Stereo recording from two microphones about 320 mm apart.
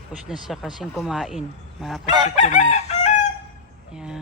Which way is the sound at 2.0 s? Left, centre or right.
Left.